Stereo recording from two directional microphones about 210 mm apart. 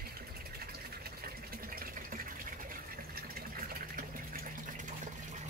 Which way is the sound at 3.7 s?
45° right (ahead or behind).